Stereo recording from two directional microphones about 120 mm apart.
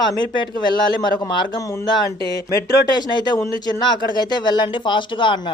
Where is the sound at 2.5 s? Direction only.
35° left (ahead or behind).